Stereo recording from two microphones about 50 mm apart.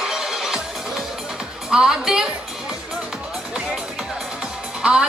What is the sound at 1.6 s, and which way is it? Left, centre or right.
Speech, centre.